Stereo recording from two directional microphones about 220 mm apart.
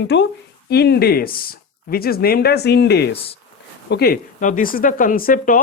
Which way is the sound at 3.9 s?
45° left (ahead or behind).